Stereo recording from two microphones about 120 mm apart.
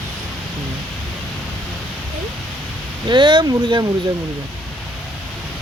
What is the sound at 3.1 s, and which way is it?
Speech, 40° right (ahead or behind).